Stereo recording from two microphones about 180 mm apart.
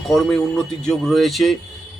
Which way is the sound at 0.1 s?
Centre (ahead or behind).